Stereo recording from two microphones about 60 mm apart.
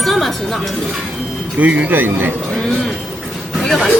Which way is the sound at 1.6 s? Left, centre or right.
Right.